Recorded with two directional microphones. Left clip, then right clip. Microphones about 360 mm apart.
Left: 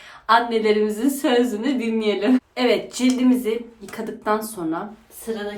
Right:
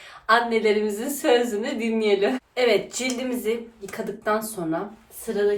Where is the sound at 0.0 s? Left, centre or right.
Centre.